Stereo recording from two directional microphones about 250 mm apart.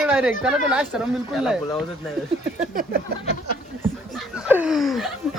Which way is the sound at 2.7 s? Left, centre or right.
Right.